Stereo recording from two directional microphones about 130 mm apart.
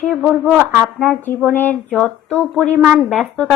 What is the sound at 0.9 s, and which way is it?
Speech, 10° left (ahead or behind).